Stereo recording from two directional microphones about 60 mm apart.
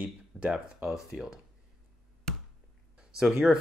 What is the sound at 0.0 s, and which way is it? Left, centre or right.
Speech, right.